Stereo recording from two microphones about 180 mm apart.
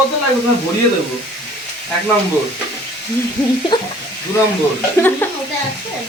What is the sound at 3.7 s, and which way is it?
Speech, 25° left (ahead or behind).